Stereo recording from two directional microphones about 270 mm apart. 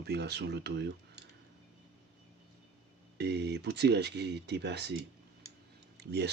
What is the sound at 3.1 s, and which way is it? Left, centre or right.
Speech, right.